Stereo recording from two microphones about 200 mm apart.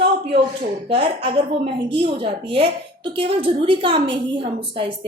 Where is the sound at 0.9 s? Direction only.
25° right (ahead or behind).